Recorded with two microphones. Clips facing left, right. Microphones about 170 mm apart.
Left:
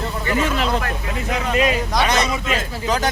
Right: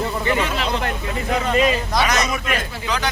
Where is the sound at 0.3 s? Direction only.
45° left (ahead or behind).